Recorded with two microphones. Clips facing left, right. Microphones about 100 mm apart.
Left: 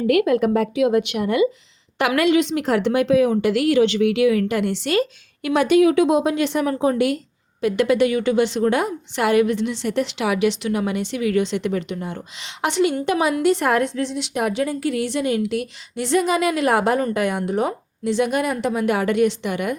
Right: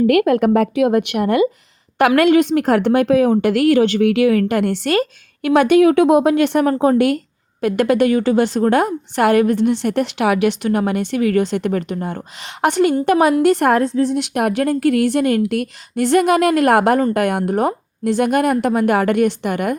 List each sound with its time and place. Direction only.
0.1 s a woman's voice: 55° right (ahead or behind)
13.7 s a woman's voice: 35° right (ahead or behind)
14.1 s a woman's voice: 55° right (ahead or behind)